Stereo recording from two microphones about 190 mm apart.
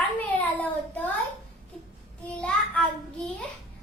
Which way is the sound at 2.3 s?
5° left (ahead or behind).